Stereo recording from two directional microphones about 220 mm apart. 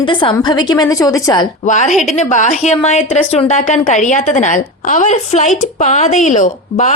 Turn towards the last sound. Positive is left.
turn(degrees=35)  # may be behind; listen again after turning